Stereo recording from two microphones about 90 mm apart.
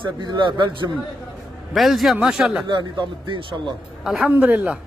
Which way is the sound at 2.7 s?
65° right (ahead or behind).